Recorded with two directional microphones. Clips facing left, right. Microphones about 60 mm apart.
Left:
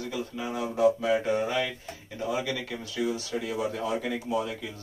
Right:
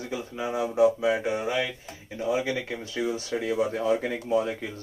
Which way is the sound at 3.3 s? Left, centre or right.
Right.